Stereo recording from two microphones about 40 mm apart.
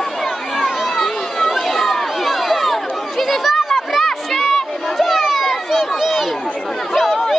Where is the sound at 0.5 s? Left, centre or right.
Centre.